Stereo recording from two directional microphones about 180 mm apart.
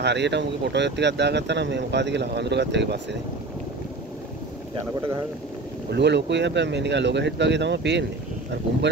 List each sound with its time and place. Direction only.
0.0 s speech: 70° right (ahead or behind)
5.9 s speech: 70° right (ahead or behind)